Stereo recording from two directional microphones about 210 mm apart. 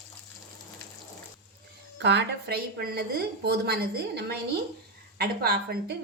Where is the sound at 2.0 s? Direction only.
55° right (ahead or behind).